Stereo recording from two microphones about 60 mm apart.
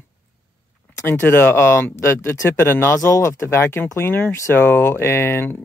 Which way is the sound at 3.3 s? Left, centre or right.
Left.